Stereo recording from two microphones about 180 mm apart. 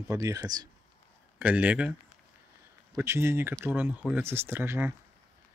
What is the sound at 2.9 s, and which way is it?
Speech, 15° right (ahead or behind).